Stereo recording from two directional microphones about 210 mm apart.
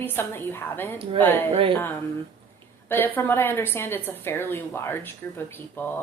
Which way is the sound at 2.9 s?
10° left (ahead or behind).